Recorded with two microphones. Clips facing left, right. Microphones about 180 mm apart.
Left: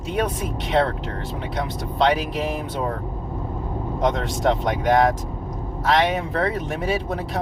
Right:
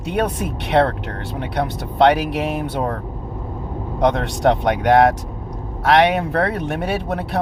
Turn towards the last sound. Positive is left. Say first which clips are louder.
# right 2 dB
turn(degrees=-65)  # may be behind; listen again after turning